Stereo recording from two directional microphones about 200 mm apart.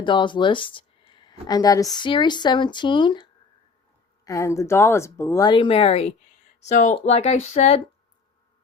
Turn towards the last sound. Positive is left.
turn(degrees=30)  # may be behind; listen again after turning